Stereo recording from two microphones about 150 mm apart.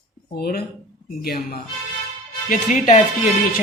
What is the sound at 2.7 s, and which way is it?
Speech, 55° left (ahead or behind).